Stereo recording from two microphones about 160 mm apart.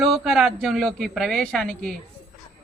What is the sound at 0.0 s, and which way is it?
A woman's voice, centre (ahead or behind).